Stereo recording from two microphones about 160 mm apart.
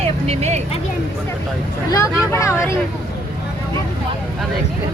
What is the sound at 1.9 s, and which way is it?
Speech, 20° left (ahead or behind).